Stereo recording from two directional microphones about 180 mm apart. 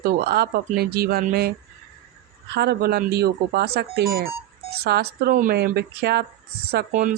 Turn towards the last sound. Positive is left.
turn(degrees=-45)  # may be behind; listen again after turning